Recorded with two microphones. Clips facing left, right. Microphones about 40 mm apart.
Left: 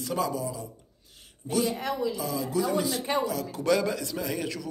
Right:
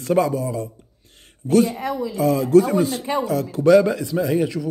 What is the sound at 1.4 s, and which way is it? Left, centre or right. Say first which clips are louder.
Speech: right 9 dB; right.